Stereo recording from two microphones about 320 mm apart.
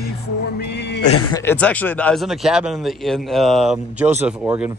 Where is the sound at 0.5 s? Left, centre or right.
Left.